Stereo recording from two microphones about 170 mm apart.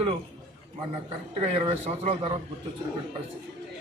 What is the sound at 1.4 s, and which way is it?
Speech, 35° right (ahead or behind).